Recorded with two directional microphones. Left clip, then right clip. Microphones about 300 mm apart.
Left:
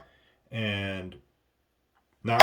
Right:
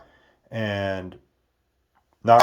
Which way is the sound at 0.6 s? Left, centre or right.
Centre.